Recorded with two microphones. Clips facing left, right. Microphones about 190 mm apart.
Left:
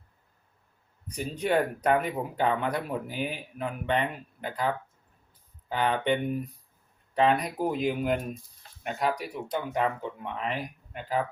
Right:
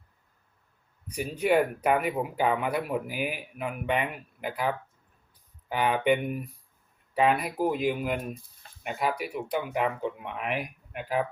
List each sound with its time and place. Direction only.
1.0 s speech: 10° right (ahead or behind)